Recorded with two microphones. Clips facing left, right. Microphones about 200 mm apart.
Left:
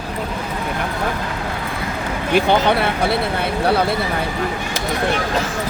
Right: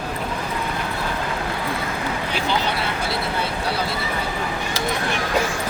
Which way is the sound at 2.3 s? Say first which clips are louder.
Left 11 dB; 60° left (ahead or behind).